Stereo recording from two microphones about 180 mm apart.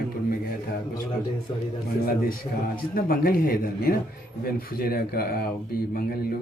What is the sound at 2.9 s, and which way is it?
Speech, 55° left (ahead or behind).